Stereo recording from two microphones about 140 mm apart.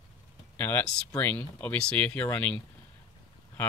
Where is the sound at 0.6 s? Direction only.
15° left (ahead or behind).